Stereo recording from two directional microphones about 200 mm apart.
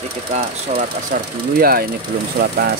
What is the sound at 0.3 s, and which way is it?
Speech, 40° right (ahead or behind).